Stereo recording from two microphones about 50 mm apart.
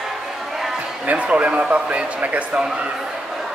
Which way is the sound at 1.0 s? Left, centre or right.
Right.